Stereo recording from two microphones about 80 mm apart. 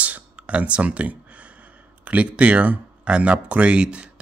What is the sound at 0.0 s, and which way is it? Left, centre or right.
Speech, centre.